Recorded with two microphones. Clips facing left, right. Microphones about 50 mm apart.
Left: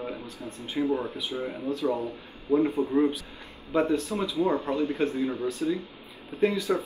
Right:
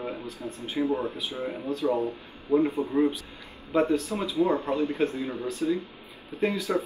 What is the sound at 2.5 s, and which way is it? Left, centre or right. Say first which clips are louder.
Speech: even; right.